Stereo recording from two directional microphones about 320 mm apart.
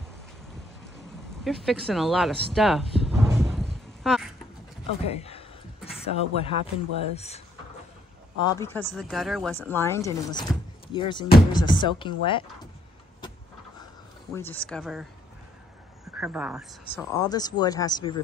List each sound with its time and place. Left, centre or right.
1.4 s a sound: centre
5.0 s speech: centre
14.3 s speech: centre
16.1 s speech: centre
16.9 s speech: centre